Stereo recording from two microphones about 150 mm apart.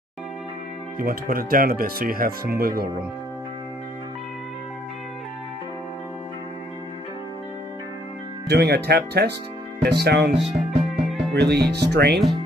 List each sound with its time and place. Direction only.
0.9 s speech: 70° right (ahead or behind)
8.5 s speech: 90° right
10.4 s music: centre (ahead or behind)
11.3 s speech: 90° right